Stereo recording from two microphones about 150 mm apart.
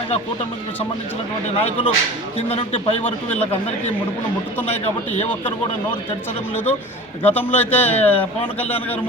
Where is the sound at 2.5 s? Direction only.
45° left (ahead or behind).